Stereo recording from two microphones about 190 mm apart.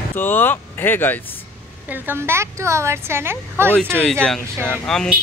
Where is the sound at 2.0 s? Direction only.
15° right (ahead or behind).